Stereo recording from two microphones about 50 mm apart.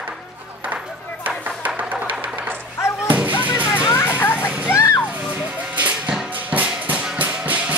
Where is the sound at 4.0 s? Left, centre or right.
Left.